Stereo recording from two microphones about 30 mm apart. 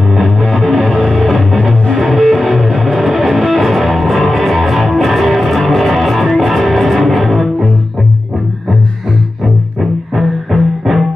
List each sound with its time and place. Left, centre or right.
0.1 s music: centre
0.8 s music: centre
1.1 s music: centre
9.8 s music: centre